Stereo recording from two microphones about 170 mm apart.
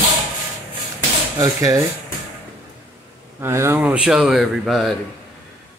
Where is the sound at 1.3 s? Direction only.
20° right (ahead or behind).